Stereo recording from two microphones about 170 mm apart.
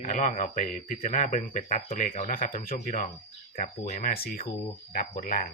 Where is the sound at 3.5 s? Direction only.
45° left (ahead or behind).